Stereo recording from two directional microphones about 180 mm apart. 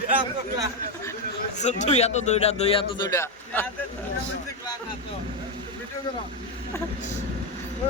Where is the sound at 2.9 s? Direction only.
20° left (ahead or behind).